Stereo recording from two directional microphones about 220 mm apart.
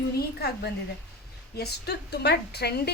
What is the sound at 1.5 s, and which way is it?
A woman's voice, 50° left (ahead or behind).